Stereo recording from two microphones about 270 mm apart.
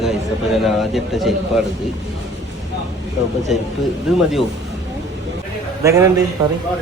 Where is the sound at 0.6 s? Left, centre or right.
Centre.